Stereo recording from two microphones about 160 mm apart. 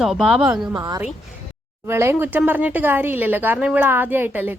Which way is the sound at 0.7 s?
25° right (ahead or behind).